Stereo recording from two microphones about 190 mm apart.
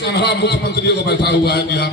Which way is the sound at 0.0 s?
60° left (ahead or behind).